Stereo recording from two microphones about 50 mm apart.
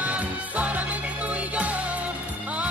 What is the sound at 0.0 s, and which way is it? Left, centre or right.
Music, right.